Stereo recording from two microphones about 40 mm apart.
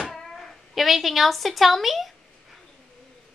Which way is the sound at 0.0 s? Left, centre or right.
Centre.